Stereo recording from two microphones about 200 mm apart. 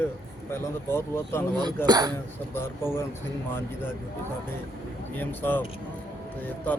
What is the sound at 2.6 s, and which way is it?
Speech, 10° left (ahead or behind).